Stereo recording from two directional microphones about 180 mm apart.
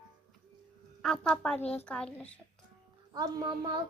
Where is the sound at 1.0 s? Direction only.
5° left (ahead or behind).